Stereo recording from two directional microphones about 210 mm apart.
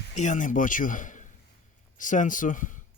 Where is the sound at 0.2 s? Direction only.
35° left (ahead or behind).